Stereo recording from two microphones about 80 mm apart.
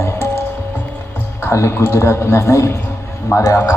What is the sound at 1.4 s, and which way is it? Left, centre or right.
A man's voice, left.